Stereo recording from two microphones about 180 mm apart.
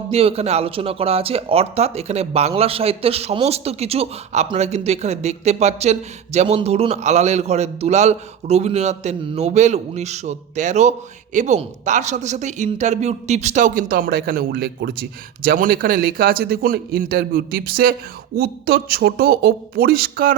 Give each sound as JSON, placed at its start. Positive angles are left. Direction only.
{"t": 0.1, "sound": "a man's voice", "side_deg": -35}